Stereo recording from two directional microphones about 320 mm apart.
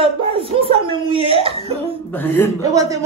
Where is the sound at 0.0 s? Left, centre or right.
Centre.